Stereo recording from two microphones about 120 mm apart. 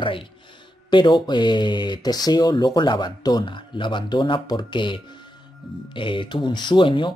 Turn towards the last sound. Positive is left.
turn(degrees=45)  # may be behind; listen again after turning